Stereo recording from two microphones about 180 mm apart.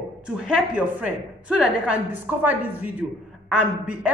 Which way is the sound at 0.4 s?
5° right (ahead or behind).